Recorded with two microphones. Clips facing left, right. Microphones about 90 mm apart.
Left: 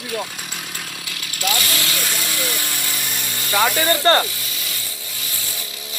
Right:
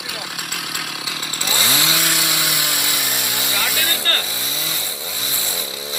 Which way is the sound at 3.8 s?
20° left (ahead or behind).